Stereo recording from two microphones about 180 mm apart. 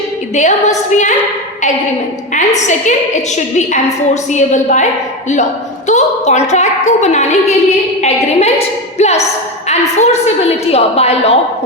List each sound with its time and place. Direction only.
0.3 s a woman's voice: 40° left (ahead or behind)
2.3 s a woman's voice: 40° left (ahead or behind)
5.9 s a woman's voice: 40° left (ahead or behind)